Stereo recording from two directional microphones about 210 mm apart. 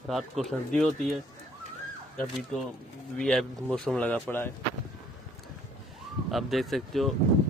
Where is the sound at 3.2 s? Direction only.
Centre (ahead or behind).